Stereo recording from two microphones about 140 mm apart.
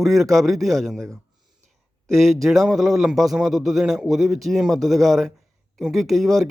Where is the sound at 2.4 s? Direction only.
Centre (ahead or behind).